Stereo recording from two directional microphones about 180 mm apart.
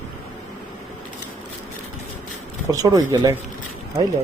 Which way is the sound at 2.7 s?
20° right (ahead or behind).